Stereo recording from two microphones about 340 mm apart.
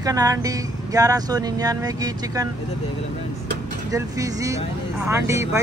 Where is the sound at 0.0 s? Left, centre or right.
Centre.